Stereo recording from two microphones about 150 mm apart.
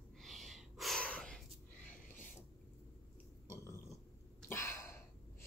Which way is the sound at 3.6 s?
20° left (ahead or behind).